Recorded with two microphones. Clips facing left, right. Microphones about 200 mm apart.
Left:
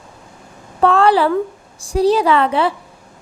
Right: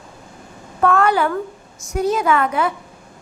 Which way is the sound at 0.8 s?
30° left (ahead or behind).